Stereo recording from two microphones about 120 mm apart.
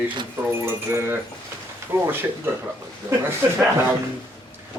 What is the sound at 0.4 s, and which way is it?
Speech, 20° right (ahead or behind).